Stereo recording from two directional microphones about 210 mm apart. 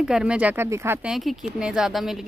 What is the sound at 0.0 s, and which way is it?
Speech, 5° right (ahead or behind).